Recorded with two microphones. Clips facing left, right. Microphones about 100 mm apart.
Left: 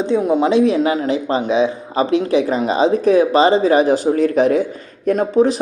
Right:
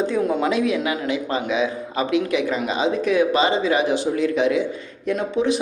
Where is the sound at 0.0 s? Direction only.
20° left (ahead or behind).